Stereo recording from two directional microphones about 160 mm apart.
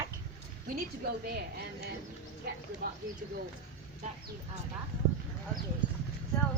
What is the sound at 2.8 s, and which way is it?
Speech, 60° right (ahead or behind).